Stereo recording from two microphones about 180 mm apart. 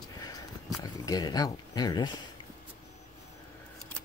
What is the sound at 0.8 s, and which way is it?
Speech, 20° left (ahead or behind).